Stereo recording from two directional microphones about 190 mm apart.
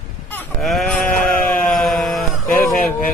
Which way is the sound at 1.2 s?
5° left (ahead or behind).